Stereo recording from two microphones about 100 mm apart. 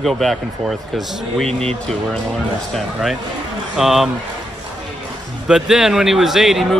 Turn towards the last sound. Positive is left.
turn(degrees=0)  # may be behind; listen again after turning